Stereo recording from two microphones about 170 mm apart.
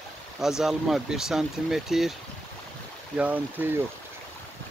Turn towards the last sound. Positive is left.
turn(degrees=-10)  # may be behind; listen again after turning